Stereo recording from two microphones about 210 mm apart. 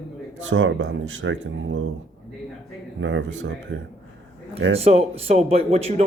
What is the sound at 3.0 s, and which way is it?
Speech, 65° right (ahead or behind).